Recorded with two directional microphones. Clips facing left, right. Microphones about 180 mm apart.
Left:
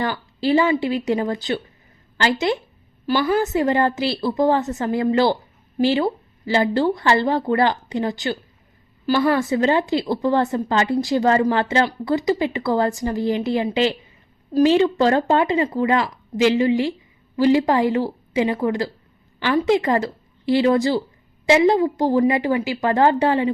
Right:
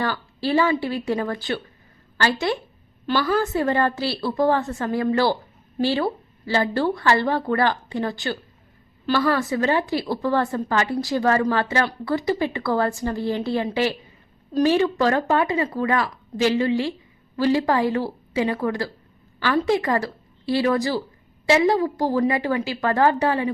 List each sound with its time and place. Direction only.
0.0 s a woman's voice: 20° left (ahead or behind)